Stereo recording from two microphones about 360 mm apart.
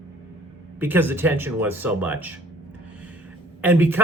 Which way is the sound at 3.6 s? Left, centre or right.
Centre.